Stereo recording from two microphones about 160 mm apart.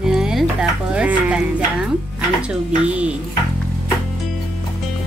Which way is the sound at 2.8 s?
5° right (ahead or behind).